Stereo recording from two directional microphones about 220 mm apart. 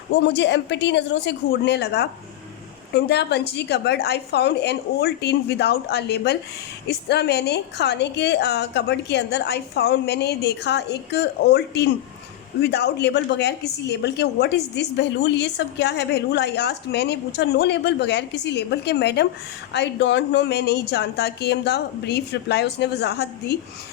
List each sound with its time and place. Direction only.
0.2 s a woman's voice: 50° left (ahead or behind)